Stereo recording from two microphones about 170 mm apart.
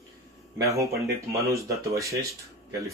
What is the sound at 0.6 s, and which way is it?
Speech, 20° right (ahead or behind).